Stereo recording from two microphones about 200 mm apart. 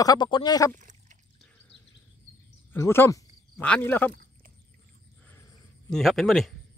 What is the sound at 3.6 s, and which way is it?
Speech, 5° left (ahead or behind).